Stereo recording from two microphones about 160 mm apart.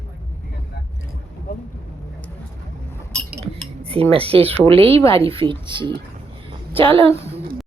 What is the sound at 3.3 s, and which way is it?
Cutlery, 40° right (ahead or behind).